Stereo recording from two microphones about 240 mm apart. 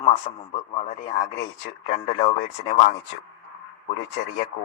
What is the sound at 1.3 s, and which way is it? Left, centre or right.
Speech, left.